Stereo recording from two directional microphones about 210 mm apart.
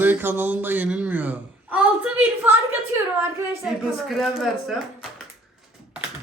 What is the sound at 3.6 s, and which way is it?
Speech, 5° right (ahead or behind).